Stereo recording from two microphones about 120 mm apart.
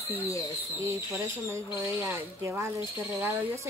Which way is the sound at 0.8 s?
25° right (ahead or behind).